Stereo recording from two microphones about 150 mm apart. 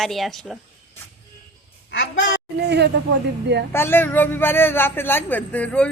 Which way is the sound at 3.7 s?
15° left (ahead or behind).